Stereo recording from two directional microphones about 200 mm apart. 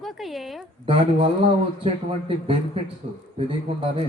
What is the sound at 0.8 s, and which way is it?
Speech, 25° right (ahead or behind).